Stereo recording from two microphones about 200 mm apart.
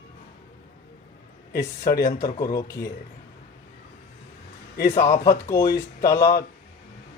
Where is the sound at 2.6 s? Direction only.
15° left (ahead or behind).